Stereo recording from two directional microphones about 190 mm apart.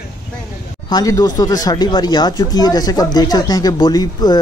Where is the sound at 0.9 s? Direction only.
20° left (ahead or behind).